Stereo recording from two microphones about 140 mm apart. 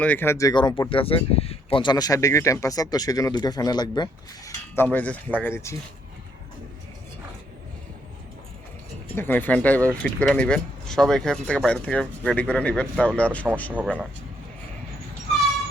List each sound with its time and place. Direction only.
0.0 s speech: 15° left (ahead or behind)
0.9 s speech: 40° left (ahead or behind)
4.7 s speech: 15° left (ahead or behind)
9.1 s speech: 15° left (ahead or behind)
13.8 s speech: 10° right (ahead or behind)